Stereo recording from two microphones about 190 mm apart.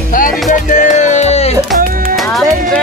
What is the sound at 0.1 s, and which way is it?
Music, 45° left (ahead or behind).